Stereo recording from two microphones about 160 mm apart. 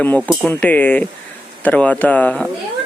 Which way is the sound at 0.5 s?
10° left (ahead or behind).